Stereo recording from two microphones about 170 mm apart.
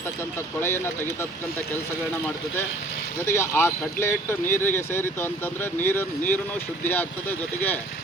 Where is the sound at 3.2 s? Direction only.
15° left (ahead or behind).